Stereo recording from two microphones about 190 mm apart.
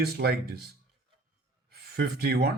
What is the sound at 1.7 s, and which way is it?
Speech, 55° right (ahead or behind).